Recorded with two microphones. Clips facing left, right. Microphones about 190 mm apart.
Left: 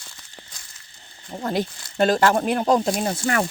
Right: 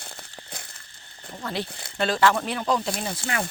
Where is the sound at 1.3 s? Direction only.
45° left (ahead or behind).